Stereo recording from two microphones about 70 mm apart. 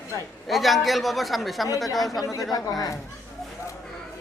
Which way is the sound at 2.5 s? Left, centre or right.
Left.